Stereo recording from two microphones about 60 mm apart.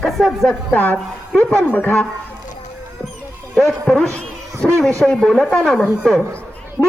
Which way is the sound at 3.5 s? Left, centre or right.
Centre.